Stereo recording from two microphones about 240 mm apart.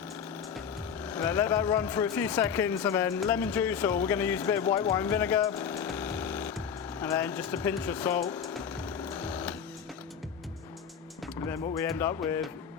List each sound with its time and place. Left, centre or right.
1.0 s speech: centre
4.9 s a sound: centre
7.0 s sewing machine: centre
11.4 s speech: centre